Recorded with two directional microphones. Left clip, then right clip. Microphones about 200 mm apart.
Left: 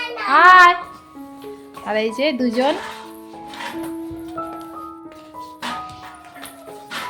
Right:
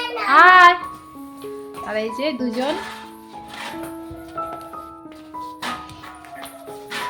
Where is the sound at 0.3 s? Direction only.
15° left (ahead or behind).